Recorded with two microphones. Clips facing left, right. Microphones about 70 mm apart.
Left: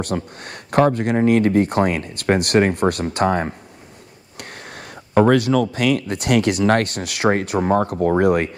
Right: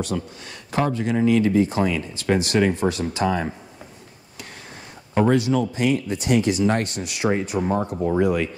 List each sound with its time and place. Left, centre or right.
0.0 s speech: left
5.1 s speech: left